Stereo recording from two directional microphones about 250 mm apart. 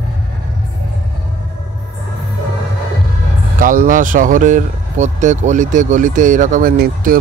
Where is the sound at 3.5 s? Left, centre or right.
Right.